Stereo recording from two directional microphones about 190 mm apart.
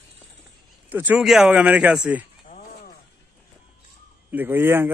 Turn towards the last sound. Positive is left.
turn(degrees=-10)  # may be behind; listen again after turning